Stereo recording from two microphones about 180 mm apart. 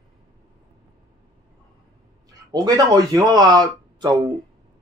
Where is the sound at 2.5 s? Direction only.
20° right (ahead or behind).